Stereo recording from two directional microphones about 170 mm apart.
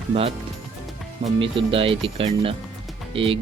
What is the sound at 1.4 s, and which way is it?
Speech, 30° right (ahead or behind).